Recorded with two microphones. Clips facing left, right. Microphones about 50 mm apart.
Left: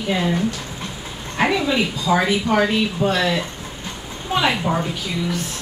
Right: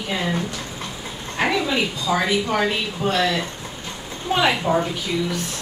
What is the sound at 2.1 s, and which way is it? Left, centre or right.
Speech, centre.